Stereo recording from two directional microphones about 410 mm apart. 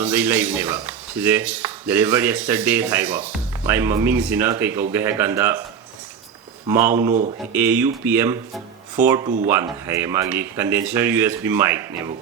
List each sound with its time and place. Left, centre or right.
0.0 s speech: centre
7.1 s speech: centre
7.5 s speech: centre